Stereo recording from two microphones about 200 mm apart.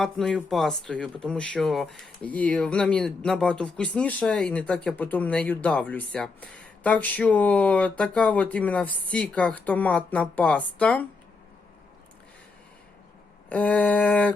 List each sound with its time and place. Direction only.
0.0 s speech: centre (ahead or behind)
13.5 s speech: 5° left (ahead or behind)